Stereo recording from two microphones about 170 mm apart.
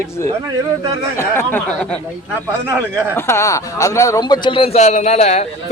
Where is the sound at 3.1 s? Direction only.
15° left (ahead or behind); by 5.5 s 40° left (ahead or behind).